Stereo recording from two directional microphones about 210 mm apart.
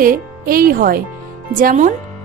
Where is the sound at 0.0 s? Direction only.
45° right (ahead or behind).